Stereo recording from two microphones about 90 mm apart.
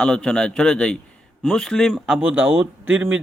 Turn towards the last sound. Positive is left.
turn(degrees=-15)  # may be behind; listen again after turning